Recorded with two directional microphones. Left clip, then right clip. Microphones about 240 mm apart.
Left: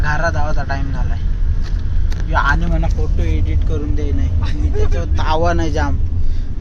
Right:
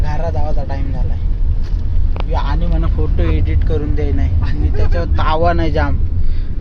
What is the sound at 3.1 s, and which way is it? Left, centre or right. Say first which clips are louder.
Speech: right 4 dB; right.